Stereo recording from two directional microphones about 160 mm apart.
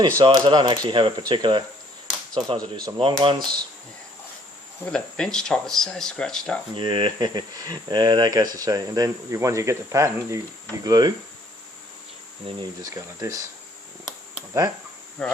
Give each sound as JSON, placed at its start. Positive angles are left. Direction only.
{"t": 0.2, "sound": "speech", "side_deg": -25}
{"t": 4.9, "sound": "speech", "side_deg": 5}
{"t": 6.7, "sound": "speech", "side_deg": -30}
{"t": 12.5, "sound": "speech", "side_deg": -20}
{"t": 15.2, "sound": "speech", "side_deg": 5}